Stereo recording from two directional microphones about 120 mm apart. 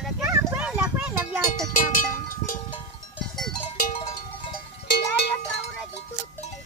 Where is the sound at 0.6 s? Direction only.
10° right (ahead or behind).